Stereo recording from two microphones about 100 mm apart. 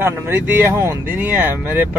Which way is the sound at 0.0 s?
20° right (ahead or behind).